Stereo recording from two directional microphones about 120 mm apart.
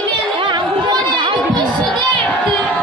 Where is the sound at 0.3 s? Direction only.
40° right (ahead or behind).